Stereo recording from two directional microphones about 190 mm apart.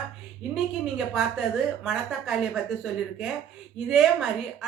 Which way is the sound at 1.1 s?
Centre (ahead or behind).